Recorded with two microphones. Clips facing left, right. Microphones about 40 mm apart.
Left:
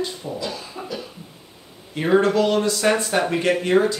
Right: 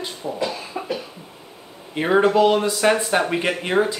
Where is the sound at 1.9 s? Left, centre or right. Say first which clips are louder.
Right 1 dB; centre.